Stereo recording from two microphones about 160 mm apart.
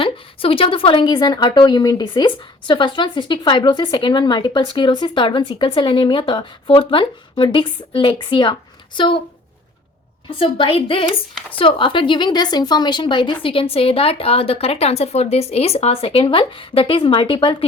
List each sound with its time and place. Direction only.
0.0 s a woman's voice: 35° left (ahead or behind)
10.3 s speech: 35° left (ahead or behind)